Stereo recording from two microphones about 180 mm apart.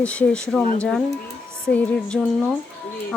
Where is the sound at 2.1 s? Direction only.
Centre (ahead or behind).